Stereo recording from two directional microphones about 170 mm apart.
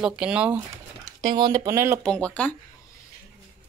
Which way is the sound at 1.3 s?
25° right (ahead or behind).